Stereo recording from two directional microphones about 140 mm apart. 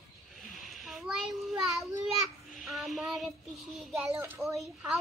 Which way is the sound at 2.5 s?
Centre (ahead or behind).